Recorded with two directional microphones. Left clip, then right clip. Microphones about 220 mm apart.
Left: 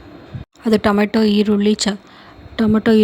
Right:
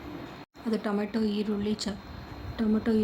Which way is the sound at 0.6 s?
40° left (ahead or behind).